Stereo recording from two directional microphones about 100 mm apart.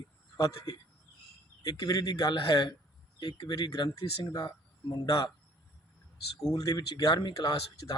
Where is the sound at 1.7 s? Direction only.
40° left (ahead or behind).